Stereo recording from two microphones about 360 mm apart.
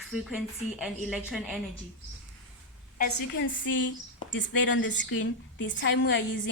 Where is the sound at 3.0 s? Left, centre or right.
Left.